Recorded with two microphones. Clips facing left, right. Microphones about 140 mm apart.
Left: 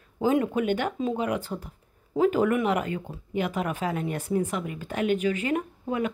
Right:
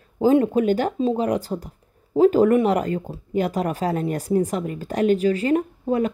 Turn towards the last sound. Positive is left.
turn(degrees=-35)  # may be behind; listen again after turning